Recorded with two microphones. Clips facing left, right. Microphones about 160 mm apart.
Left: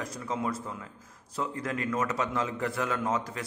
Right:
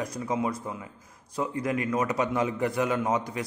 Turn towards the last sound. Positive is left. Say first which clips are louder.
# right 3 dB
turn(degrees=-15)  # may be behind; listen again after turning